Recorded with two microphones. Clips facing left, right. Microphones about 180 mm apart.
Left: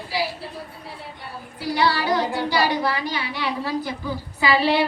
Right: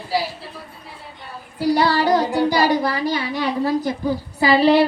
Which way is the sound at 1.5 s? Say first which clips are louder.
Right 5 dB; 45° right (ahead or behind).